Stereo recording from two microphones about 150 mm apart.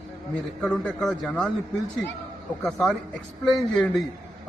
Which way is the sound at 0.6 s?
10° left (ahead or behind).